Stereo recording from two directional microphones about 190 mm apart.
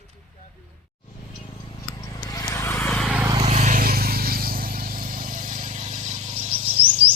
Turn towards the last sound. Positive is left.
turn(degrees=-30)  # may be behind; listen again after turning